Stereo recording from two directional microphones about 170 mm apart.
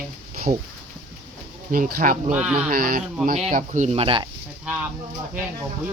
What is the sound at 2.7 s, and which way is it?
Speech, 60° right (ahead or behind).